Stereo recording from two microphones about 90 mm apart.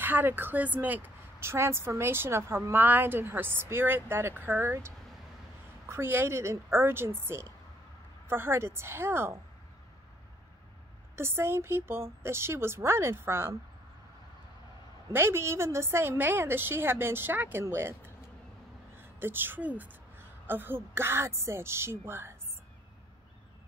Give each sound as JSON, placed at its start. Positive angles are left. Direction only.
{"t": 0.0, "sound": "a woman's voice", "side_deg": -20}
{"t": 11.1, "sound": "a woman's voice", "side_deg": -30}
{"t": 15.1, "sound": "a woman's voice", "side_deg": -30}